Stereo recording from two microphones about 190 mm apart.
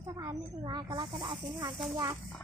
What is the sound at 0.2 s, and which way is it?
Speech, 20° right (ahead or behind).